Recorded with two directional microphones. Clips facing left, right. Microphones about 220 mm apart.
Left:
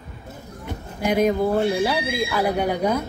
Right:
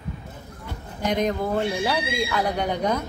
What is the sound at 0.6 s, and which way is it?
Speech, 10° left (ahead or behind).